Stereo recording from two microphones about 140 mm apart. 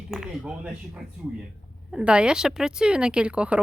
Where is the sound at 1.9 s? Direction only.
5° right (ahead or behind).